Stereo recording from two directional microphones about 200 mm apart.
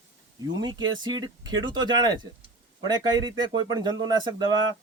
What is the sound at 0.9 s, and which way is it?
Speech, 20° right (ahead or behind).